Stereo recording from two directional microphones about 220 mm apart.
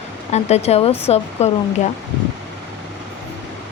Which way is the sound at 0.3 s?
30° left (ahead or behind).